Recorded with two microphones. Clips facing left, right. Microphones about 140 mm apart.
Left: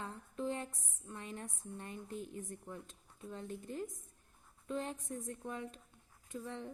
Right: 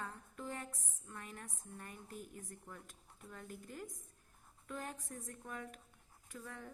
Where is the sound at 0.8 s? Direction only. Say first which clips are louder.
Left 3 dB; 20° left (ahead or behind).